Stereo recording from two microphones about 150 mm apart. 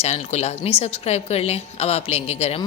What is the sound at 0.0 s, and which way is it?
A woman's voice, 45° left (ahead or behind).